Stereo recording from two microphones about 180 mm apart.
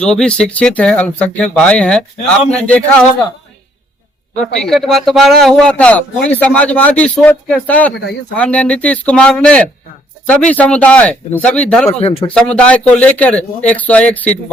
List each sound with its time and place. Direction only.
0.0 s speech: 5° left (ahead or behind)
4.4 s speech: centre (ahead or behind)
7.9 s speech: 70° left (ahead or behind)
8.4 s speech: 5° left (ahead or behind)
11.9 s speech: 35° left (ahead or behind)
12.3 s speech: 5° left (ahead or behind)